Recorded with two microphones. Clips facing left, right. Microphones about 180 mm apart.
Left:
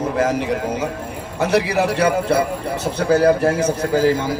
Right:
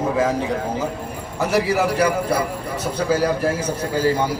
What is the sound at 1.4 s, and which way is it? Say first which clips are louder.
Speech: left 2 dB; 70° left (ahead or behind).